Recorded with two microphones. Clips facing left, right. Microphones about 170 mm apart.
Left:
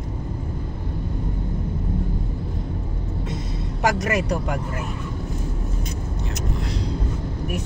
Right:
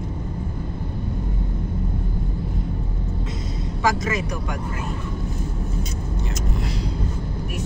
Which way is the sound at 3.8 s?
70° left (ahead or behind).